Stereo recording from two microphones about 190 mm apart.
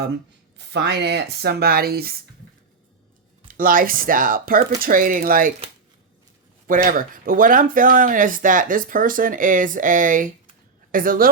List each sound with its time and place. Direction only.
0.5 s speech: 65° right (ahead or behind)
3.5 s speech: 45° right (ahead or behind)
6.7 s speech: 45° right (ahead or behind)